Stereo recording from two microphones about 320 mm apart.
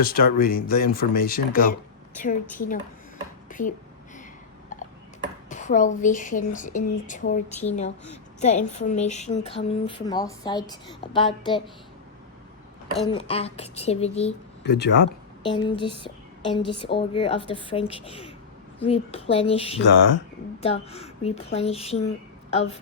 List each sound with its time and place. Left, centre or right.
0.0 s a woman's voice: left
5.5 s a woman's voice: left
13.1 s a woman's voice: centre
14.6 s speech: left
16.5 s speech: centre
19.8 s speech: left
20.6 s a woman's voice: centre